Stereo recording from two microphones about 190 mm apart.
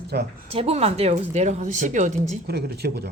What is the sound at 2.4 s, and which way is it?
Speech, 55° right (ahead or behind).